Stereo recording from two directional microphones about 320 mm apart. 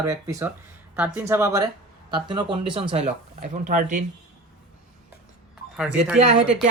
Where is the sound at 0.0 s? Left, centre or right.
Centre.